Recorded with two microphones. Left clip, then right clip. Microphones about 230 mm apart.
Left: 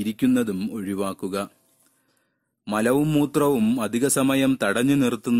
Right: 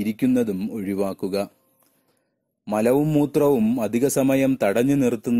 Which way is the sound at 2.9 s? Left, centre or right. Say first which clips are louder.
Right 1 dB; left.